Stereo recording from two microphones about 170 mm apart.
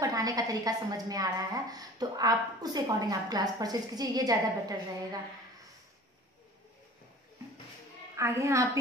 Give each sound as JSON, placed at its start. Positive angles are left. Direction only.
{"t": 0.0, "sound": "a woman's voice", "side_deg": -20}
{"t": 8.2, "sound": "a woman's voice", "side_deg": -15}